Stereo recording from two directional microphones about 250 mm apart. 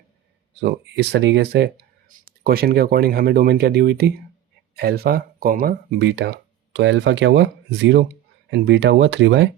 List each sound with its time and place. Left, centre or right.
0.6 s speech: right